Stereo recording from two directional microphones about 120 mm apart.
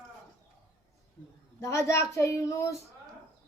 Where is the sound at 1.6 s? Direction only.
25° left (ahead or behind).